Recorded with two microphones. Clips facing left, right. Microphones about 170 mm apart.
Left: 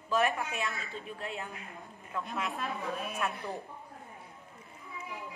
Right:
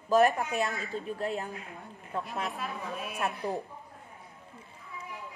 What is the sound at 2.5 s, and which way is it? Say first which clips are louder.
Speech: left 1 dB; centre (ahead or behind).